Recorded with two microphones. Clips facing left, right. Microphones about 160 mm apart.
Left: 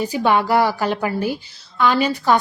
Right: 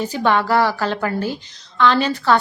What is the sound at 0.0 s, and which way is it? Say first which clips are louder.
A woman's voice: left 1 dB; 10° left (ahead or behind).